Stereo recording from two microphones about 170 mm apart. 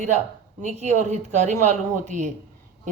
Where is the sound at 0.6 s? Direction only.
45° right (ahead or behind).